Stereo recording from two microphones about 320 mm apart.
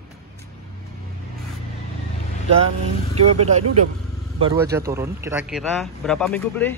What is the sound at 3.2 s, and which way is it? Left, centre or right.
Speech, right.